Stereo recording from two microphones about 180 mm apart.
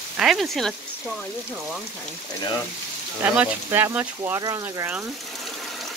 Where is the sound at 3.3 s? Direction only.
10° right (ahead or behind).